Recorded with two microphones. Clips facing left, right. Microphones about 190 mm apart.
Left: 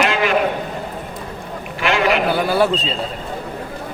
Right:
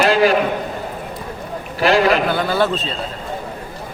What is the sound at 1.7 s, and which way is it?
Speech, 35° right (ahead or behind).